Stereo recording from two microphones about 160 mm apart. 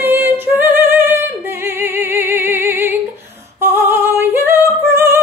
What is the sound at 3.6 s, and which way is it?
Female singing, 15° right (ahead or behind).